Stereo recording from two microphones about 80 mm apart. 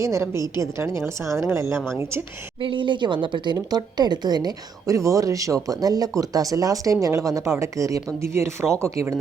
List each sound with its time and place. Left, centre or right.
0.0 s a woman's voice: right
2.6 s speech: right
4.9 s speech: right